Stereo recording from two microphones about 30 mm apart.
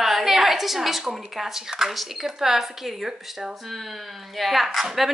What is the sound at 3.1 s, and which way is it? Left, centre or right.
Speech, centre.